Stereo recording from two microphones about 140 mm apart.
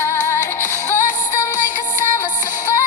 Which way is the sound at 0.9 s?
65° left (ahead or behind).